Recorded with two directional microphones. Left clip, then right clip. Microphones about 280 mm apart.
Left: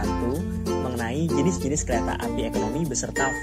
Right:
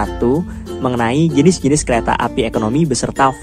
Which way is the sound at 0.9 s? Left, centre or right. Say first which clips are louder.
Right 11 dB; right.